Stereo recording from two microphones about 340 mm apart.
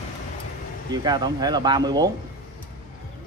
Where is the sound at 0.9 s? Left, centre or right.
Centre.